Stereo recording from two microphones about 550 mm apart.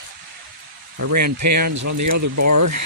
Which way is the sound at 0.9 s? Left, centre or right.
Right.